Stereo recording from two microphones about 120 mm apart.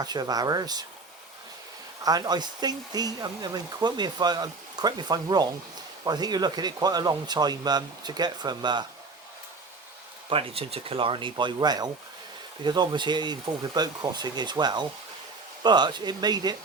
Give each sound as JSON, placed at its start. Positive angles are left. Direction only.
{"t": 0.0, "sound": "speech", "side_deg": -35}
{"t": 2.0, "sound": "speech", "side_deg": -35}
{"t": 10.2, "sound": "speech", "side_deg": -50}